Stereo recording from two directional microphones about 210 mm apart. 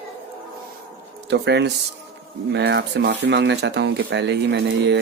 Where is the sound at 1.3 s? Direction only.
55° right (ahead or behind).